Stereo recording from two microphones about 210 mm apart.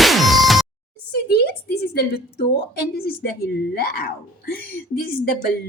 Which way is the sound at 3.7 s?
45° left (ahead or behind).